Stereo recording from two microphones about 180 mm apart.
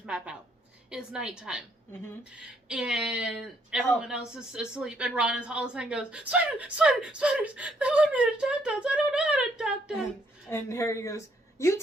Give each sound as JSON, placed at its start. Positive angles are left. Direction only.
{"t": 0.0, "sound": "a woman's voice", "side_deg": -5}
{"t": 10.5, "sound": "speech", "side_deg": 15}